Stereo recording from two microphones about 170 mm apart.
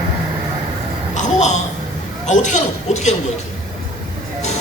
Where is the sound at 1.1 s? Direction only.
45° left (ahead or behind).